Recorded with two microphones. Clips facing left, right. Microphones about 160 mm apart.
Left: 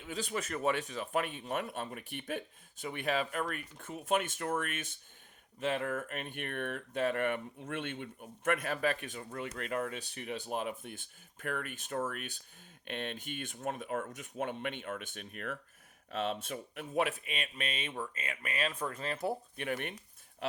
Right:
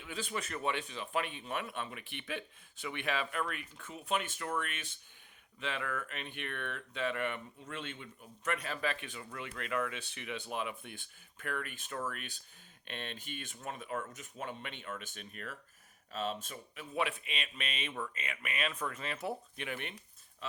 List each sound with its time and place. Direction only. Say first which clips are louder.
0.0 s speech: left 2 dB; 40° left (ahead or behind); by 16.9 s 60° left (ahead or behind)
16.9 s speech: left 3 dB; 45° left (ahead or behind)